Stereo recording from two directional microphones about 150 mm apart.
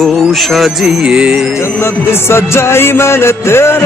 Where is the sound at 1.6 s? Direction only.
15° left (ahead or behind).